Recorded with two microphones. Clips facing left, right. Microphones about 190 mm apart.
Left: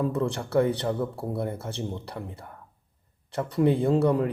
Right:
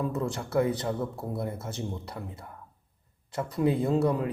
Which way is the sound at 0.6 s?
30° left (ahead or behind).